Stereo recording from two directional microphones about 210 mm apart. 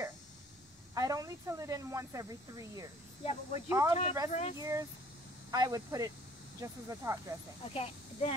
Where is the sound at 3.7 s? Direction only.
15° right (ahead or behind).